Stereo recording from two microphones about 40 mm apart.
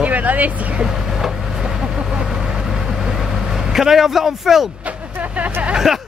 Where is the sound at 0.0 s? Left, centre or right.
Right.